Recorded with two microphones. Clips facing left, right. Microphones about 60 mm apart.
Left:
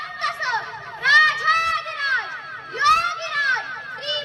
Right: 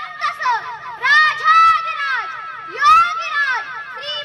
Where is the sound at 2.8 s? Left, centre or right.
Right.